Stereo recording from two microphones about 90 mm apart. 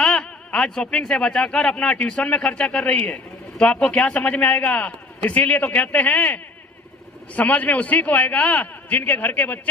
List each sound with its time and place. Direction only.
0.0 s speech: 10° left (ahead or behind)